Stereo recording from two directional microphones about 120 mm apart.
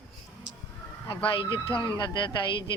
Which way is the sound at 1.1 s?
45° left (ahead or behind).